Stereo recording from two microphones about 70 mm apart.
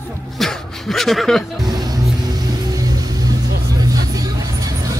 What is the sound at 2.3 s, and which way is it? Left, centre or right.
Vehicle, right.